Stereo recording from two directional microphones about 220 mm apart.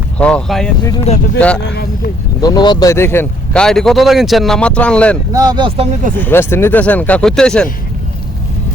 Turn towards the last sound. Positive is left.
turn(degrees=5)  # may be behind; listen again after turning